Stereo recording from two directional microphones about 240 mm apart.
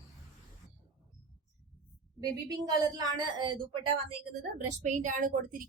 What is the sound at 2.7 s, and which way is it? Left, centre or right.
A woman's voice, centre.